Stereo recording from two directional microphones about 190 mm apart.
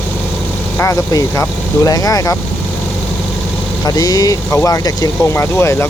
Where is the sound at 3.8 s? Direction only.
20° left (ahead or behind).